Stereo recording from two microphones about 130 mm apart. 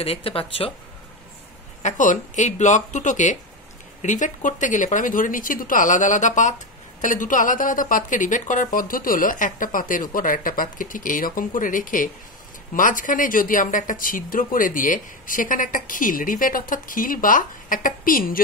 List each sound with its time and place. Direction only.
0.0 s speech: 45° left (ahead or behind)
1.8 s a woman's voice: 75° left (ahead or behind)
7.0 s speech: 85° left